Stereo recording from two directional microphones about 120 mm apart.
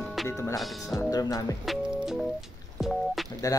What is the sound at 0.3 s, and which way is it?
Speech, 25° left (ahead or behind).